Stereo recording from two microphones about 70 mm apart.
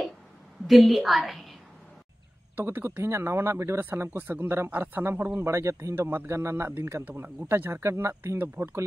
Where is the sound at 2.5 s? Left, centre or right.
Right.